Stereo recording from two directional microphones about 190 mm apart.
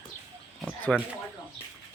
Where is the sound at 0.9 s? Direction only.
5° left (ahead or behind).